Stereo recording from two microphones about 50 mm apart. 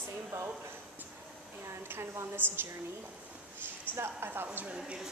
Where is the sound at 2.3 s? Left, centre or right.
Right.